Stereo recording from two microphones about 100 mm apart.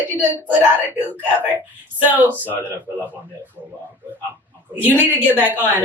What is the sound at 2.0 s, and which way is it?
Speech, 20° right (ahead or behind).